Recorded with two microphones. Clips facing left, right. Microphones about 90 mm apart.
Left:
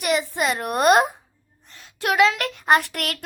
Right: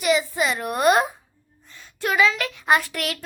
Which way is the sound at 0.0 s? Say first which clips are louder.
Right 1 dB; 60° left (ahead or behind).